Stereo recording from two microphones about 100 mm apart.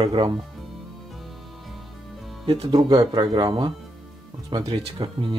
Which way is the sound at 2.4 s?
70° right (ahead or behind).